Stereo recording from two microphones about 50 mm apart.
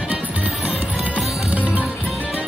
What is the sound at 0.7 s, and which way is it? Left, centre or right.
Music, right.